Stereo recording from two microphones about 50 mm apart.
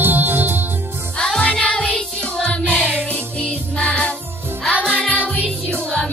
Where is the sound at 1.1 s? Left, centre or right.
Centre.